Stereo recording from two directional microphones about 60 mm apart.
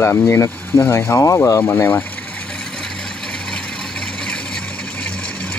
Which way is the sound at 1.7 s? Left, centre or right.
Left.